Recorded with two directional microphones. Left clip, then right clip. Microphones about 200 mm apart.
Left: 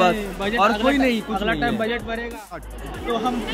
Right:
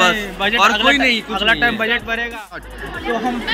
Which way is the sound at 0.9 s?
40° left (ahead or behind).